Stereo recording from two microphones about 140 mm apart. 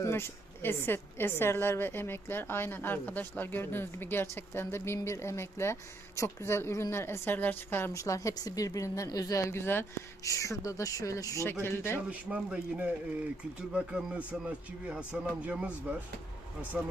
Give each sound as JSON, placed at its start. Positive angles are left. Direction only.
{"t": 0.0, "sound": "a woman's voice", "side_deg": 20}
{"t": 12.3, "sound": "speech", "side_deg": -5}